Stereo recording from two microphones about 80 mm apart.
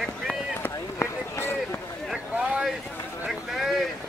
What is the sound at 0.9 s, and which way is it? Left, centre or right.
Run, left.